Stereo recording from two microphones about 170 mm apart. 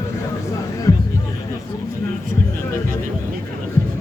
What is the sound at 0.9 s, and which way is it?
Music, 20° left (ahead or behind).